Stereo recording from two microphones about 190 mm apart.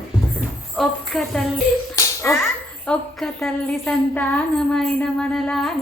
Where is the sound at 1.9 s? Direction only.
15° left (ahead or behind).